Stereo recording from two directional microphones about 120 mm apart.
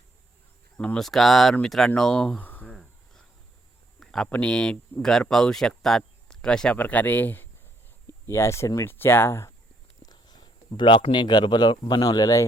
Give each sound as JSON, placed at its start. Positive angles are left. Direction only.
{"t": 0.8, "sound": "speech", "side_deg": 5}
{"t": 4.0, "sound": "speech", "side_deg": 5}
{"t": 10.1, "sound": "speech", "side_deg": 35}